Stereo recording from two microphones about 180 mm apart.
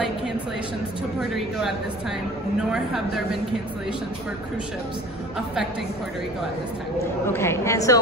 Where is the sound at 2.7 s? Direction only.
Centre (ahead or behind).